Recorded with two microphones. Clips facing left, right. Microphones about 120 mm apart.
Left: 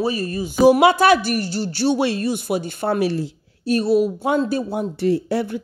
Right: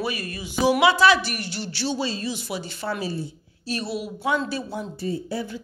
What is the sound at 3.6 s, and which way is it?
A man's voice, 45° left (ahead or behind).